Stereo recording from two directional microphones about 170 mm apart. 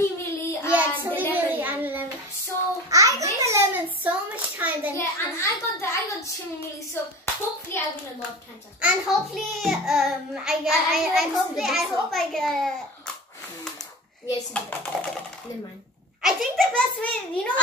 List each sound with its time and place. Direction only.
0.0 s child singing: 15° left (ahead or behind)
0.7 s child singing: 10° right (ahead or behind)
1.3 s a sound: 10° right (ahead or behind)
4.9 s a sound: 15° left (ahead or behind)
7.0 s clapping: 15° left (ahead or behind)
7.7 s hands: 15° left (ahead or behind)
8.8 s a child's voice: centre (ahead or behind)
14.9 s a child's voice: centre (ahead or behind)
16.2 s a child's voice: centre (ahead or behind)